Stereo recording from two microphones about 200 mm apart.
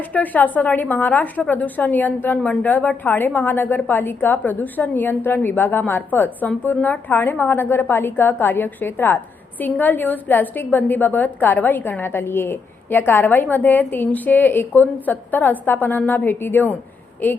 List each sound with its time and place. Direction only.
0.1 s a woman's voice: 10° left (ahead or behind)